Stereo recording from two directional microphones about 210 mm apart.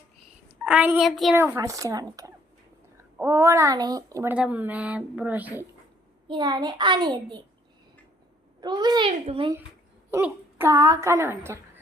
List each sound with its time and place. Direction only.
0.4 s a woman's voice: 5° right (ahead or behind)
1.4 s a child's voice: 10° right (ahead or behind)
6.2 s a child's voice: 20° right (ahead or behind)
8.6 s a child's voice: 20° right (ahead or behind)
10.1 s a child's voice: 10° right (ahead or behind)